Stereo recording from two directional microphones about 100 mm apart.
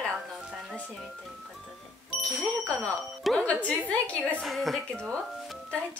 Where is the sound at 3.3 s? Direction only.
15° left (ahead or behind).